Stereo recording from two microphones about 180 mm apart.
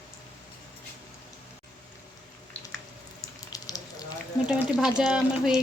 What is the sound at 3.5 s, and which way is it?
Frying, 20° left (ahead or behind).